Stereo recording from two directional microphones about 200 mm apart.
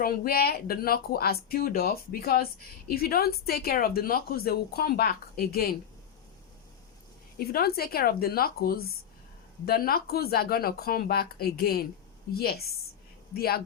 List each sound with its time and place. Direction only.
0.0 s speech: 50° left (ahead or behind)
7.3 s speech: 50° left (ahead or behind)